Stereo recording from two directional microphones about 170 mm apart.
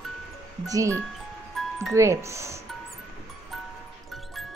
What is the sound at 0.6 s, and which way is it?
Speech, 20° right (ahead or behind).